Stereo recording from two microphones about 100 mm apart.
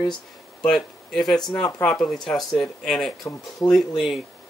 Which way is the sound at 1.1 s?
5° left (ahead or behind).